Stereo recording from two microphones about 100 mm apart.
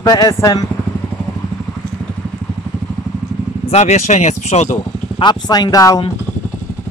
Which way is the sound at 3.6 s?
90° left.